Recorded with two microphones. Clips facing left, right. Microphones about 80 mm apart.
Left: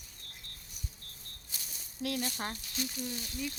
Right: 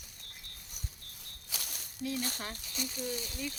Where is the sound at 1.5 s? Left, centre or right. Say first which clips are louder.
Right 6 dB; right.